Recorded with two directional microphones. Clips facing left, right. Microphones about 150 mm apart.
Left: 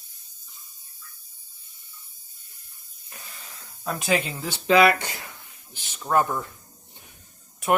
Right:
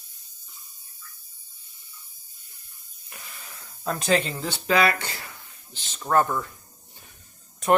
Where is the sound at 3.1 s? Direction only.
35° left (ahead or behind).